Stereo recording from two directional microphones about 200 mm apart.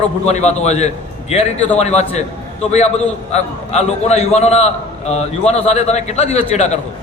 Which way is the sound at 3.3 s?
35° left (ahead or behind).